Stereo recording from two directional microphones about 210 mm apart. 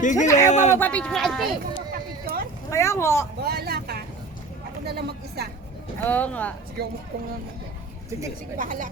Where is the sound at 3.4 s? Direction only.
50° right (ahead or behind).